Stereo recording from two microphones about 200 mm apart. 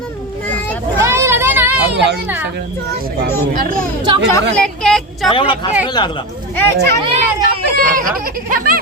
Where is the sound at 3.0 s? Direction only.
45° right (ahead or behind).